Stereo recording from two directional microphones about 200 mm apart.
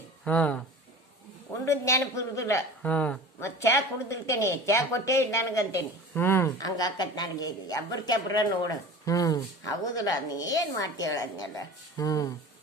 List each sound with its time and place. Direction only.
0.3 s a man's voice: 5° left (ahead or behind)
1.6 s a man's voice: 15° left (ahead or behind)